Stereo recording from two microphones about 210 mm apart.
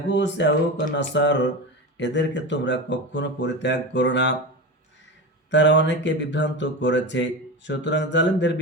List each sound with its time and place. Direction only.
0.1 s speech: 55° left (ahead or behind)
5.5 s speech: 55° left (ahead or behind)